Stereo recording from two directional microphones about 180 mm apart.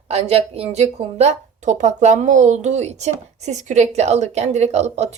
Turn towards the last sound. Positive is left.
turn(degrees=-40)  # may be behind; listen again after turning